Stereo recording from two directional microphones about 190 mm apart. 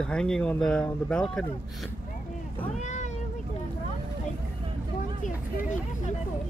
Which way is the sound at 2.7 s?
40° left (ahead or behind).